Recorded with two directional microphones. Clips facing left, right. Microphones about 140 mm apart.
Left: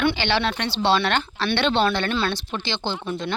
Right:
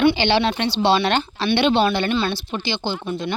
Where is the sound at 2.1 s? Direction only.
Centre (ahead or behind).